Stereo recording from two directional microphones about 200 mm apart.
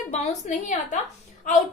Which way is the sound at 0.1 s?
35° left (ahead or behind).